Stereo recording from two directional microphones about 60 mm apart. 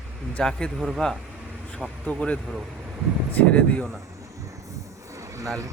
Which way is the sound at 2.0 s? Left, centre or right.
Centre.